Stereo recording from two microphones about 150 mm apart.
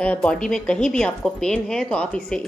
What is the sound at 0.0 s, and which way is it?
Speech, 10° left (ahead or behind).